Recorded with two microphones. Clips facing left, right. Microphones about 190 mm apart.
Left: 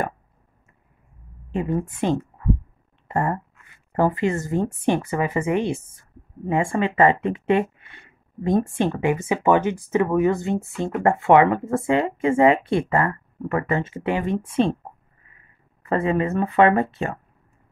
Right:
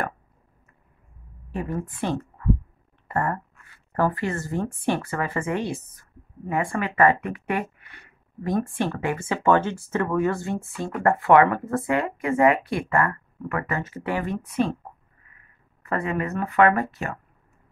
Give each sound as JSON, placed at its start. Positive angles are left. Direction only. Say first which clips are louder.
{"t": 1.5, "sound": "a woman's voice", "louder": "left 5 dB", "side_deg": 20}
{"t": 15.9, "sound": "a woman's voice", "louder": "left 5 dB", "side_deg": 30}